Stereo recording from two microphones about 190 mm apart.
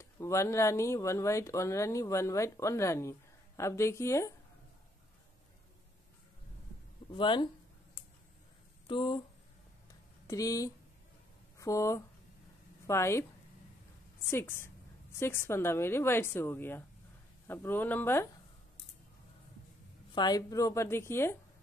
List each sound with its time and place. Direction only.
0.0 s speech: 15° left (ahead or behind)
7.2 s speech: 25° left (ahead or behind)
8.8 s speech: 25° left (ahead or behind)
10.2 s a woman's voice: 15° left (ahead or behind)
14.3 s speech: 10° left (ahead or behind)
20.2 s speech: 20° left (ahead or behind)